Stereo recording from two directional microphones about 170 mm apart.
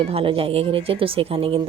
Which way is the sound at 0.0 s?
35° right (ahead or behind).